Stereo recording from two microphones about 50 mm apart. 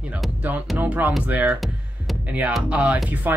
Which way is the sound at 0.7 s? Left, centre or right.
Right.